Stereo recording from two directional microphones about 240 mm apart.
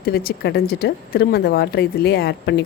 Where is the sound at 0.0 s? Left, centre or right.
Left.